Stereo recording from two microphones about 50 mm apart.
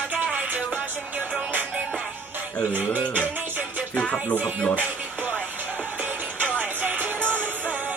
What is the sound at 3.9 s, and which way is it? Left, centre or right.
Speech, left.